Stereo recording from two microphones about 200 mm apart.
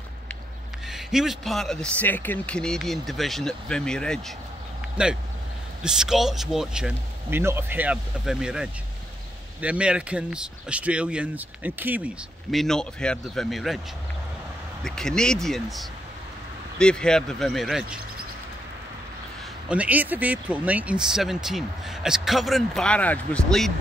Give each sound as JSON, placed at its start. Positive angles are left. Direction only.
{"t": 0.8, "sound": "speech", "side_deg": 0}
{"t": 5.8, "sound": "speech", "side_deg": -5}
{"t": 14.8, "sound": "speech", "side_deg": 5}
{"t": 19.7, "sound": "speech", "side_deg": -5}